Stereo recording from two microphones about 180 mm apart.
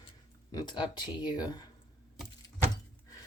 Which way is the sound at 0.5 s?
25° left (ahead or behind).